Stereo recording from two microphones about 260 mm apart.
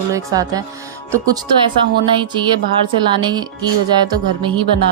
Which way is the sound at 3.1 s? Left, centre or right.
Centre.